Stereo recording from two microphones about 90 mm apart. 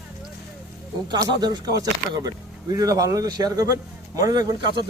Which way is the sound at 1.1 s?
50° right (ahead or behind).